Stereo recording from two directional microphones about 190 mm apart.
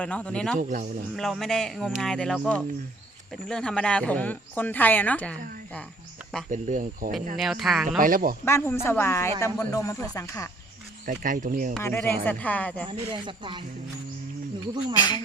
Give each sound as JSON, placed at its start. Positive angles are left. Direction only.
{"t": 0.0, "sound": "speech", "side_deg": 5}
{"t": 0.6, "sound": "speech", "side_deg": -45}
{"t": 1.1, "sound": "speech", "side_deg": 0}
{"t": 6.5, "sound": "speech", "side_deg": -40}
{"t": 7.3, "sound": "speech", "side_deg": 0}
{"t": 7.9, "sound": "speech", "side_deg": -45}
{"t": 8.4, "sound": "speech", "side_deg": 15}
{"t": 11.0, "sound": "speech", "side_deg": -45}
{"t": 11.8, "sound": "speech", "side_deg": 10}
{"t": 12.9, "sound": "speech", "side_deg": -25}
{"t": 14.9, "sound": "speech", "side_deg": 25}